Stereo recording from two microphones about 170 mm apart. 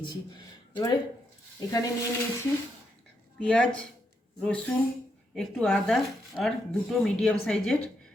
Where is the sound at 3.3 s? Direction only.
5° left (ahead or behind).